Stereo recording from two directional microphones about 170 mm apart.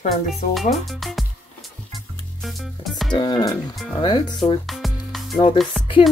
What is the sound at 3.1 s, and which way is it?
Speech, 25° left (ahead or behind).